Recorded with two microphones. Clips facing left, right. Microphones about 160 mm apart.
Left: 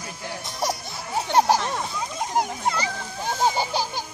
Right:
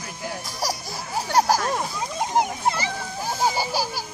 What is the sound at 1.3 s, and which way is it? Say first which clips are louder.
Speech: left 1 dB; 25° left (ahead or behind).